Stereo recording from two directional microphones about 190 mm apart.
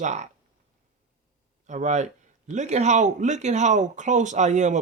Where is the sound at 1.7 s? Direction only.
40° right (ahead or behind).